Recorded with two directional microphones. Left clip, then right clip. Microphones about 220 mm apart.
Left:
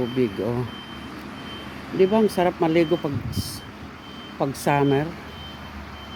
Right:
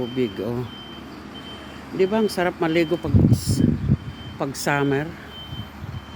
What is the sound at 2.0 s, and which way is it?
Speech, 5° left (ahead or behind).